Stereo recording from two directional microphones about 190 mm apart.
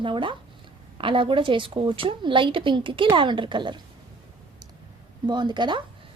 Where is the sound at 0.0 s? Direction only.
25° right (ahead or behind).